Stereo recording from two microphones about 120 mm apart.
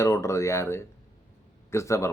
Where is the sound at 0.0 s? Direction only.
25° left (ahead or behind).